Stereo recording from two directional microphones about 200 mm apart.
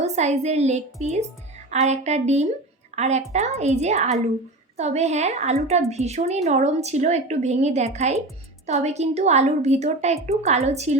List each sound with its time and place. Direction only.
0.0 s a woman's voice: 35° right (ahead or behind)